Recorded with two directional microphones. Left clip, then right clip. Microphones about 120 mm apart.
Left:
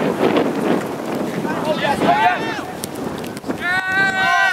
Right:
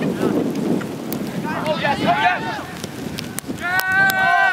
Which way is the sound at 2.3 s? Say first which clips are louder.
Left 2 dB; 55° left (ahead or behind).